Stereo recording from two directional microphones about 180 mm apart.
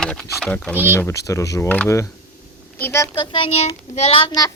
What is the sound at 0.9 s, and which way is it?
Speech, 15° left (ahead or behind).